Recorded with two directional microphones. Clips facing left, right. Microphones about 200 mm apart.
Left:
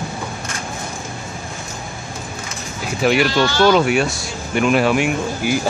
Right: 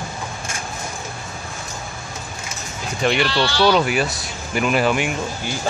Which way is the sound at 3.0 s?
5° left (ahead or behind).